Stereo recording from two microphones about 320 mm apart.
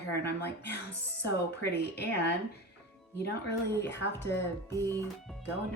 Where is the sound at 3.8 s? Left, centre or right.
Left.